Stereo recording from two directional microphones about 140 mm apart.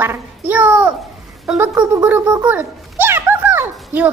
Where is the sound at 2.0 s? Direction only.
10° right (ahead or behind).